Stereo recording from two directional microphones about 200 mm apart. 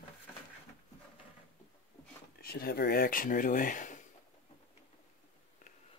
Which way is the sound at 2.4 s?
50° left (ahead or behind).